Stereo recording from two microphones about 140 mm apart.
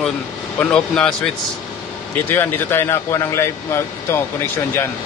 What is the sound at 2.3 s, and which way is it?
Speech, 15° left (ahead or behind).